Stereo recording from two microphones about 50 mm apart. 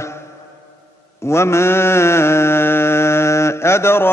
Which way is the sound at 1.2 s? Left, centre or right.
Left.